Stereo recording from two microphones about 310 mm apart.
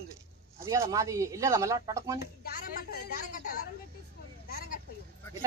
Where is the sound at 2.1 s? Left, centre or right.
Left.